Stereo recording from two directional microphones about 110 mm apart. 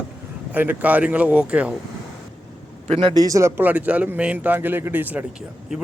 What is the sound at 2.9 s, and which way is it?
Speech, 55° right (ahead or behind).